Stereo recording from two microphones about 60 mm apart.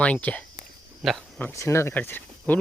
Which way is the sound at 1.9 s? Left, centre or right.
Left.